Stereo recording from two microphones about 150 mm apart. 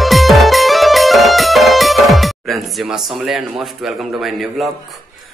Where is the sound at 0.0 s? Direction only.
Centre (ahead or behind).